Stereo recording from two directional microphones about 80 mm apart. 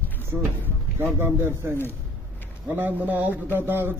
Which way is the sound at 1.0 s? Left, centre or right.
Right.